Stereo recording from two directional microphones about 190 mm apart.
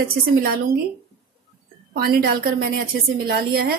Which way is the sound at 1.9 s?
50° right (ahead or behind).